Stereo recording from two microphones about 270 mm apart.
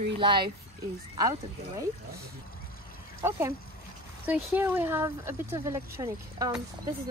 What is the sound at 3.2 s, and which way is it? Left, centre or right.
Speech, centre.